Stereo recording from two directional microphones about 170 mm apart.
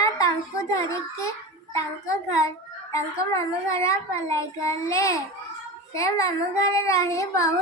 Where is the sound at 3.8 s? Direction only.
20° left (ahead or behind).